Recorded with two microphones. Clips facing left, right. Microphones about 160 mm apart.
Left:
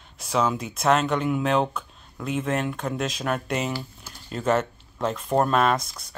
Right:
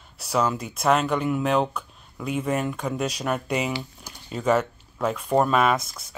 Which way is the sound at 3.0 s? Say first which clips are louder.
Right 1 dB; 10° right (ahead or behind).